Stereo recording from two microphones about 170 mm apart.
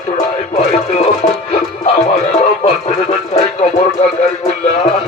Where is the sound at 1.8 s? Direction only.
40° left (ahead or behind).